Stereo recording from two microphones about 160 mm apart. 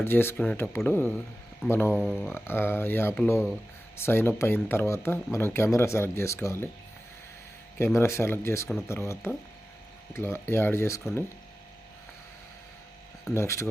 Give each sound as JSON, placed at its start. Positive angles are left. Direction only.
{"t": 0.0, "sound": "speech", "side_deg": 15}
{"t": 1.9, "sound": "speech", "side_deg": -5}
{"t": 2.2, "sound": "speech", "side_deg": 15}
{"t": 7.8, "sound": "speech", "side_deg": 15}
{"t": 13.3, "sound": "speech", "side_deg": 15}